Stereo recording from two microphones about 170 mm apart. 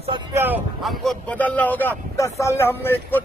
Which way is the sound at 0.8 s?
Centre (ahead or behind).